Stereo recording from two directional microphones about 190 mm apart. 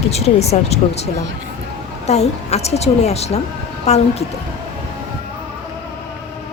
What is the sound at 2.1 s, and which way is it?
A woman's voice, 35° left (ahead or behind).